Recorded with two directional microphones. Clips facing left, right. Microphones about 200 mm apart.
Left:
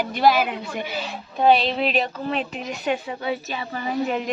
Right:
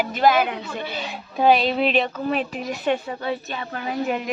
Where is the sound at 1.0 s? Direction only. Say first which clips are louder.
Even; centre (ahead or behind).